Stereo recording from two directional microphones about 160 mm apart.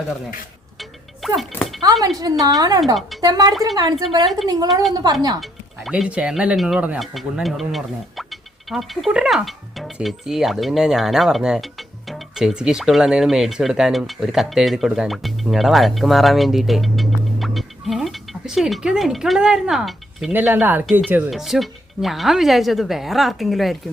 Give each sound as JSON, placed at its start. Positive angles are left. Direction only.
{"t": 1.2, "sound": "speech", "side_deg": 0}
{"t": 1.8, "sound": "a woman's voice", "side_deg": -25}
{"t": 2.8, "sound": "speech", "side_deg": 0}
{"t": 3.2, "sound": "a woman's voice", "side_deg": -25}
{"t": 4.7, "sound": "speech", "side_deg": 0}
{"t": 21.2, "sound": "speech", "side_deg": 0}